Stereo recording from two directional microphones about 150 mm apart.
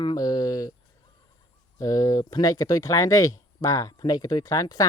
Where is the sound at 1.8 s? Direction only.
25° left (ahead or behind).